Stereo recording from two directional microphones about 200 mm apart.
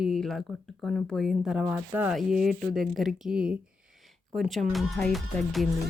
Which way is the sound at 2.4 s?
5° left (ahead or behind).